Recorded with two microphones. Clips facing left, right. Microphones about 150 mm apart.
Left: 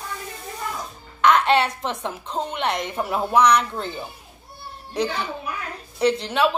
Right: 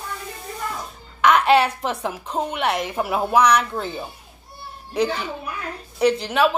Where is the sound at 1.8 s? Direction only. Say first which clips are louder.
Right 2 dB; 10° right (ahead or behind).